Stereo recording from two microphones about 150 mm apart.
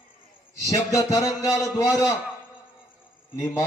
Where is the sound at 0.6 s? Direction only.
20° left (ahead or behind).